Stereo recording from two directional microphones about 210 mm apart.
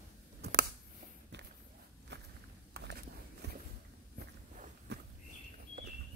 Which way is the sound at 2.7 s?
50° right (ahead or behind).